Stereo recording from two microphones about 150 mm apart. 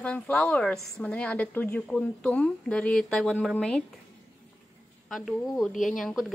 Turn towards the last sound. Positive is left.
turn(degrees=0)  # may be behind; listen again after turning